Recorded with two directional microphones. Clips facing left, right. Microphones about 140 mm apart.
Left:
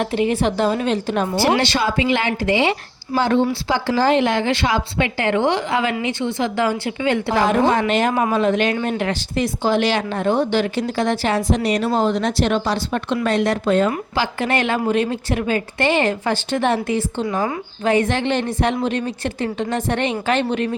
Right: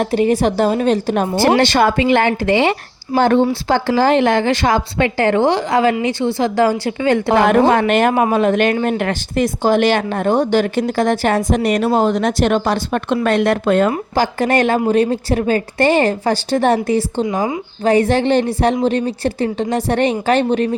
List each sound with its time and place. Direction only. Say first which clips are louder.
0.0 s a woman's voice: right 4 dB; 40° right (ahead or behind)
7.3 s a woman's voice: right 5 dB; 60° right (ahead or behind)
14.2 s a woman's voice: right 6 dB; 40° right (ahead or behind)
17.2 s a woman's voice: right 3 dB; 20° right (ahead or behind)
17.8 s a woman's voice: right 5 dB; 35° right (ahead or behind)